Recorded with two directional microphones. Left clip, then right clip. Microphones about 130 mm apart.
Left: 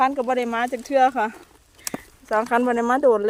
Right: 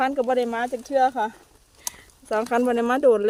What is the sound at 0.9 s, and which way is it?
Speech, 45° left (ahead or behind).